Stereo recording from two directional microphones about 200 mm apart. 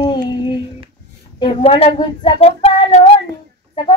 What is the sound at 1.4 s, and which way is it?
Speech, 25° left (ahead or behind).